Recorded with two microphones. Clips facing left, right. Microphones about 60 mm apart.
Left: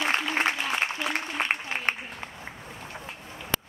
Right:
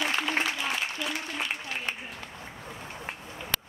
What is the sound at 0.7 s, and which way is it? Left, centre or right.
Applause, left.